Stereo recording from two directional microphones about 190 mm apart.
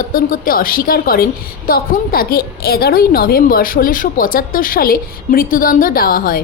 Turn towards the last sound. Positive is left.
turn(degrees=50)  # may be behind; listen again after turning